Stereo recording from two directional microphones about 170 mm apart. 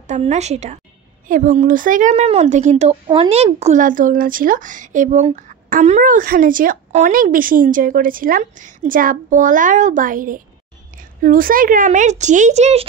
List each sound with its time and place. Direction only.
0.0 s a woman's voice: 40° right (ahead or behind)
1.2 s a woman's voice: 50° right (ahead or behind)